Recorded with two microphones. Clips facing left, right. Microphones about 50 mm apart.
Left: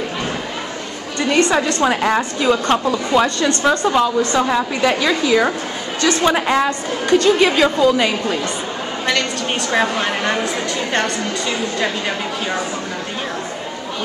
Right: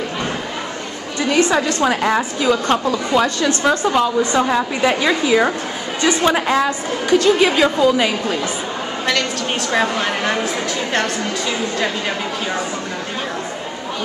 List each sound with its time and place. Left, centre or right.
1.2 s a woman's voice: centre
6.2 s a woman's voice: centre
9.7 s a woman's voice: centre